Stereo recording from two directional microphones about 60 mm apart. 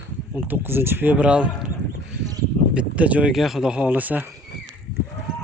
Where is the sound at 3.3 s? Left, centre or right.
Centre.